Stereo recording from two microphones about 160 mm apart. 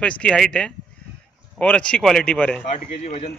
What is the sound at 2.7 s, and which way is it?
Speech, 45° left (ahead or behind).